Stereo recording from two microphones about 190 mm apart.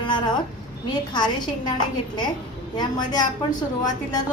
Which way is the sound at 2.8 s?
20° left (ahead or behind).